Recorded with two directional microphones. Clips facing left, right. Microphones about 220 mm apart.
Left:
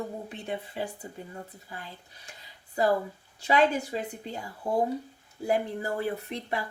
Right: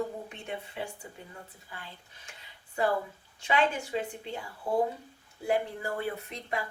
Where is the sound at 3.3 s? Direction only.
40° left (ahead or behind).